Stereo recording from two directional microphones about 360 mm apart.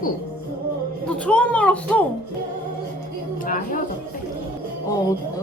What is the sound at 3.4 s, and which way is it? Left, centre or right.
Speech, left.